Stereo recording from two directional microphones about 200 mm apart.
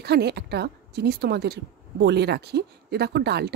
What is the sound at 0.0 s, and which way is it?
A woman's voice, 55° right (ahead or behind).